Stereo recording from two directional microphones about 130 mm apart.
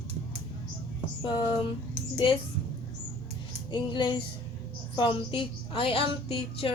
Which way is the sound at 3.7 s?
35° left (ahead or behind).